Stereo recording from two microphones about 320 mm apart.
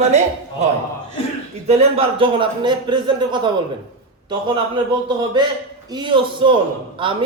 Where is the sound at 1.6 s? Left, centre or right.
Centre.